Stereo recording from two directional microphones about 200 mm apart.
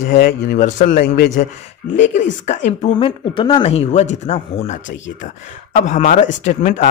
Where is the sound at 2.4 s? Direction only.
35° left (ahead or behind).